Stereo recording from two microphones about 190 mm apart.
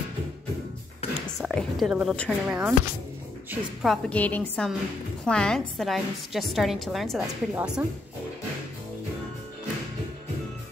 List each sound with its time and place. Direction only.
1.0 s a sound: 30° left (ahead or behind)
1.4 s a woman's voice: centre (ahead or behind)
3.8 s a woman's voice: 5° left (ahead or behind)